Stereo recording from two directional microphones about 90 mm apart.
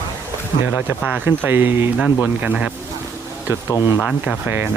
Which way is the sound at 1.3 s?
25° right (ahead or behind).